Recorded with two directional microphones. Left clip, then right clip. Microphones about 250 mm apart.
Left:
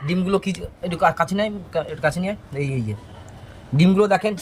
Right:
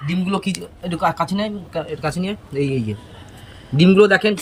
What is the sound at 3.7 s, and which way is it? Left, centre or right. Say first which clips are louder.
Speech: right 5 dB; left.